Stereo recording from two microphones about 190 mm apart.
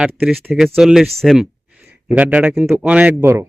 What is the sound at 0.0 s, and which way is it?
Speech, 5° right (ahead or behind).